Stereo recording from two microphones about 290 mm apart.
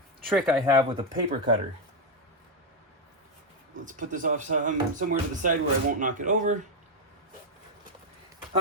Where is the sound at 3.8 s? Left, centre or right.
Right.